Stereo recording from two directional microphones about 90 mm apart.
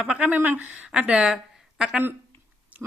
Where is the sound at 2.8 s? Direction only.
5° right (ahead or behind).